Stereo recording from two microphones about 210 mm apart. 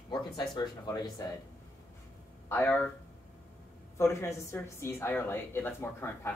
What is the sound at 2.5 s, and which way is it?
Speech, 10° left (ahead or behind).